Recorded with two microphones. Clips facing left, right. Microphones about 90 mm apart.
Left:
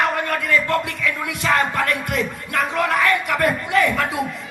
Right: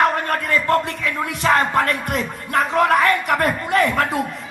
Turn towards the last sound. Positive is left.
turn(degrees=-45)  # may be behind; listen again after turning